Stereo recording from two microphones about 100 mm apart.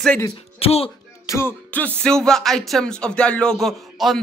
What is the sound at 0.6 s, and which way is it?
Speech, 80° left.